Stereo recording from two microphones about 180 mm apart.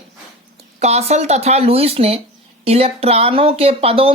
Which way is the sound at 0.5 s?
35° right (ahead or behind).